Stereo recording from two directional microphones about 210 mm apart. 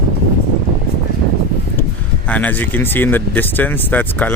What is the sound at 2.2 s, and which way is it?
Speech, 5° left (ahead or behind).